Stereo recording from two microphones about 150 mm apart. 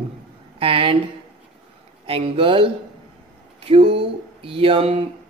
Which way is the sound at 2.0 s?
40° right (ahead or behind).